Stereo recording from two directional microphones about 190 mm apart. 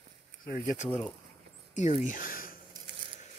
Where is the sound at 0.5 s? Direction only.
45° left (ahead or behind).